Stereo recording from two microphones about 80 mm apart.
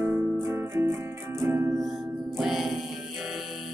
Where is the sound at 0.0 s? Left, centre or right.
Right.